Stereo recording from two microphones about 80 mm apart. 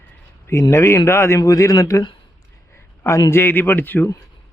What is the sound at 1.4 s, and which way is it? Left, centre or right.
Speech, left.